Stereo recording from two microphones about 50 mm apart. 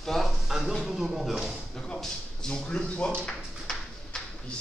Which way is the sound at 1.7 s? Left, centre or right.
Centre.